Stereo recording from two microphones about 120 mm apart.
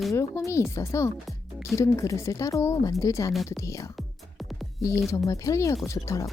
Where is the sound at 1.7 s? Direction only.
25° left (ahead or behind).